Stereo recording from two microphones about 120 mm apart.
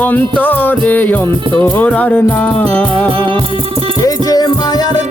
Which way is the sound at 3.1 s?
50° right (ahead or behind).